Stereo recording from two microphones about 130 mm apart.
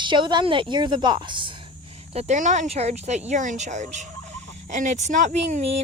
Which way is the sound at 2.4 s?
65° right (ahead or behind).